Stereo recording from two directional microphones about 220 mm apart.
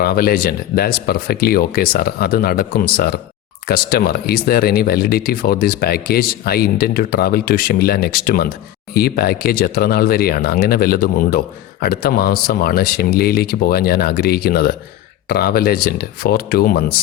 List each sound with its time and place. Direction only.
0.0 s speech: 45° left (ahead or behind)